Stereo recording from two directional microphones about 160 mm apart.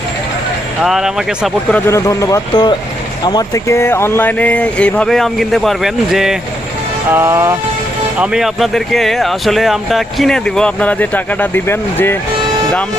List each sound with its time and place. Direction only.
0.8 s speech: centre (ahead or behind)
1.9 s speech: 20° left (ahead or behind); by 6.3 s centre (ahead or behind)
7.1 s vehicle: 15° right (ahead or behind)
8.2 s speech: 5° right (ahead or behind); by 12.1 s 15° left (ahead or behind)